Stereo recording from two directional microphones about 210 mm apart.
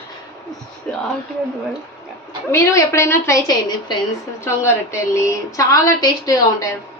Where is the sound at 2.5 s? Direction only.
10° left (ahead or behind).